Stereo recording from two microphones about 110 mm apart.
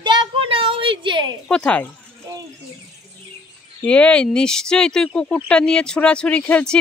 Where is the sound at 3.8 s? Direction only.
10° left (ahead or behind).